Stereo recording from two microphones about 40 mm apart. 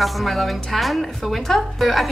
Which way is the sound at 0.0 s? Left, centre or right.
Centre.